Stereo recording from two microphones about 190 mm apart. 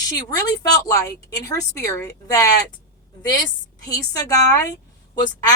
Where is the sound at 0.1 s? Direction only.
20° left (ahead or behind).